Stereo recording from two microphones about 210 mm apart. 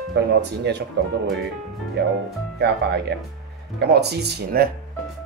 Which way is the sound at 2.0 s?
55° right (ahead or behind).